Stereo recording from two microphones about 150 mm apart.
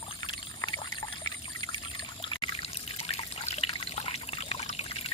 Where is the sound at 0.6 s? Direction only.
30° left (ahead or behind).